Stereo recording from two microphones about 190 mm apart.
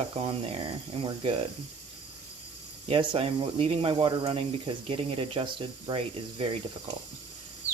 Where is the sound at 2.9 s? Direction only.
30° right (ahead or behind).